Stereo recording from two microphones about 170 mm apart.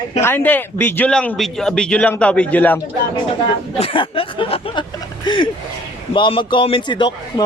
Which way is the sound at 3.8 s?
30° left (ahead or behind).